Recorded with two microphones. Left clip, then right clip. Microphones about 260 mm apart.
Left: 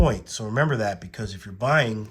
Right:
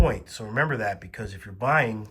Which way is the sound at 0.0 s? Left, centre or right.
Centre.